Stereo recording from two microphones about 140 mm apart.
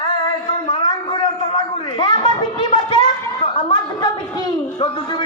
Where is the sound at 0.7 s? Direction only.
30° left (ahead or behind).